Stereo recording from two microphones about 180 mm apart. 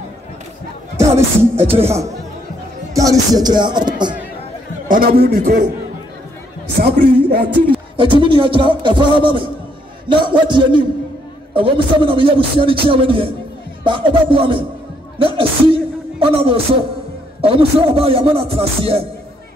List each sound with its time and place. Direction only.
0.9 s speech: 15° right (ahead or behind)
4.8 s a man's voice: 55° right (ahead or behind)
6.8 s a man's voice: 60° right (ahead or behind)
8.0 s speech: 25° right (ahead or behind)